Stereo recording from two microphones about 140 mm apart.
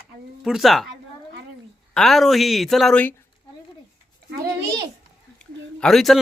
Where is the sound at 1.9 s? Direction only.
Centre (ahead or behind).